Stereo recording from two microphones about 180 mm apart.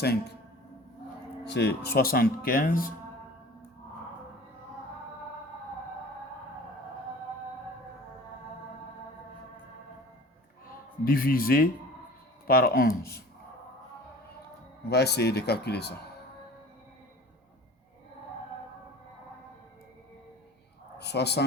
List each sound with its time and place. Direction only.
0.0 s speech: 65° left (ahead or behind)
1.5 s speech: 65° left (ahead or behind)
11.0 s a man's voice: 55° left (ahead or behind)
14.8 s speech: 65° left (ahead or behind)
21.0 s speech: 70° left (ahead or behind)